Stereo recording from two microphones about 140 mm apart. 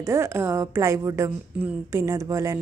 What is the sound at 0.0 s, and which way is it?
A woman's voice, 20° right (ahead or behind).